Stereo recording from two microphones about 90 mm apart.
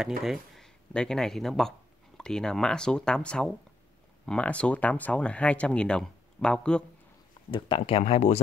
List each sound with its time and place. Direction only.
0.0 s speech: 5° right (ahead or behind)
7.5 s speech: 75° left (ahead or behind)